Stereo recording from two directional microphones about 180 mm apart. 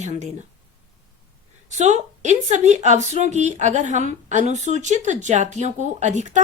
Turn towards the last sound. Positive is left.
turn(degrees=-40)  # may be behind; listen again after turning